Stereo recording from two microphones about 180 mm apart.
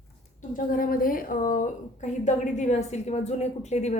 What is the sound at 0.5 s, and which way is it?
A woman's voice, 50° left (ahead or behind).